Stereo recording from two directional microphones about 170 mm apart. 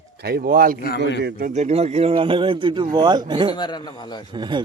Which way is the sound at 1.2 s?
60° right (ahead or behind).